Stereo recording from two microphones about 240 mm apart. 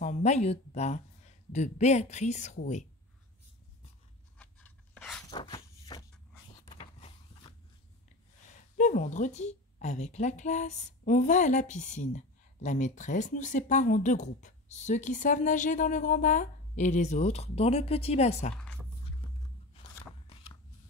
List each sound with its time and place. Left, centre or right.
0.0 s a woman's voice: left
4.4 s pant: centre
5.3 s walk: centre
6.6 s creak: left
8.7 s a woman's voice: left